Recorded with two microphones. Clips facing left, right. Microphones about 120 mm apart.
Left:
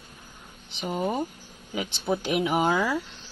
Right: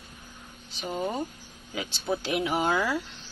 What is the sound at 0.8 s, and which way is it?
Speech, 15° left (ahead or behind).